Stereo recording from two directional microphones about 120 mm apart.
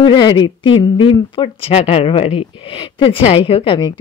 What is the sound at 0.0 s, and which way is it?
Speech, 40° left (ahead or behind).